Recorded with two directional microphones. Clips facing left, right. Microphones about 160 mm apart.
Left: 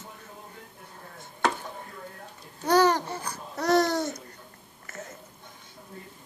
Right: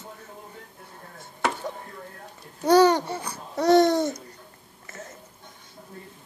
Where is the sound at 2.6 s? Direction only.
25° right (ahead or behind).